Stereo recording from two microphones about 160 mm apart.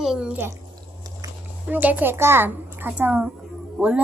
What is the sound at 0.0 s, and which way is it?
Speech, 5° right (ahead or behind).